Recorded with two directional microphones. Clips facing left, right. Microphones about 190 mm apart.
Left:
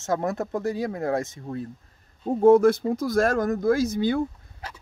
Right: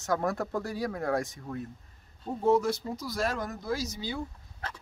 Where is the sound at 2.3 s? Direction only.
50° left (ahead or behind).